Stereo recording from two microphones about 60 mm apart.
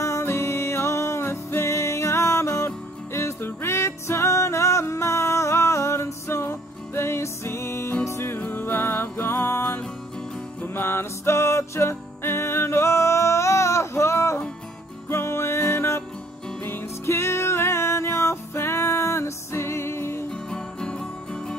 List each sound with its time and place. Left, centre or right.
0.0 s music: left
8.5 s music: left
20.2 s music: centre